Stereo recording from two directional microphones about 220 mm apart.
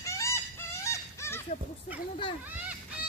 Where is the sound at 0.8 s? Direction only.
10° left (ahead or behind).